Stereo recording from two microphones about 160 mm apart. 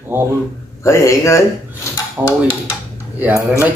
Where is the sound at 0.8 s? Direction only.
20° left (ahead or behind).